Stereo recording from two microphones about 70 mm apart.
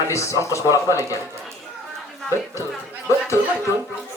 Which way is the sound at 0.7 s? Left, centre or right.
Right.